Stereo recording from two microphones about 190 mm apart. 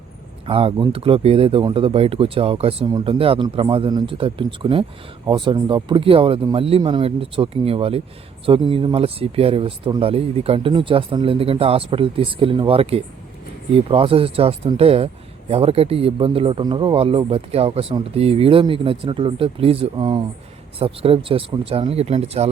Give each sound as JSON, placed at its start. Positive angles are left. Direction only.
{"t": 0.4, "sound": "speech", "side_deg": -30}